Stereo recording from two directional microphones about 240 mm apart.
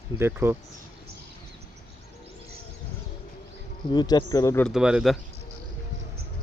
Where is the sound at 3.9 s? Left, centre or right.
Centre.